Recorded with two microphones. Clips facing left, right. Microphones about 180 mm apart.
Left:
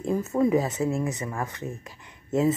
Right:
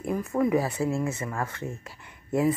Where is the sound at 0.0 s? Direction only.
25° left (ahead or behind).